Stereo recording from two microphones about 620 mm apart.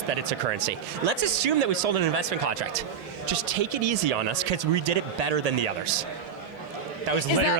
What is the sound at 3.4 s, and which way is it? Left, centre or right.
Speech, right.